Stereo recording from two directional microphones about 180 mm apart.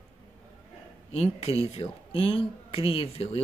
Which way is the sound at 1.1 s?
35° left (ahead or behind).